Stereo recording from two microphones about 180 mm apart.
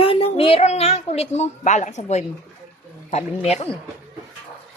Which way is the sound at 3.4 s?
35° left (ahead or behind).